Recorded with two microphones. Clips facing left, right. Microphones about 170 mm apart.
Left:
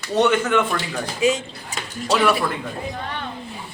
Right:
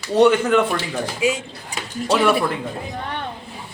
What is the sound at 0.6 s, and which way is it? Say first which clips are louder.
A man's voice: right 2 dB; 10° right (ahead or behind).